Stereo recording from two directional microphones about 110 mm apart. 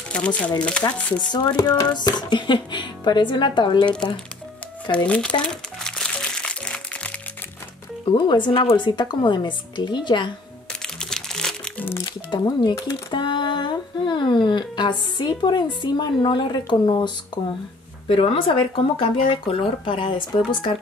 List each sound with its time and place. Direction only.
0.1 s speech: 10° left (ahead or behind)
1.3 s speech: 40° left (ahead or behind)
4.9 s crumpling: 10° left (ahead or behind)
8.0 s speech: 50° left (ahead or behind)
10.7 s crumpling: 5° left (ahead or behind)
11.8 s speech: 20° left (ahead or behind)
12.1 s speech: 45° left (ahead or behind)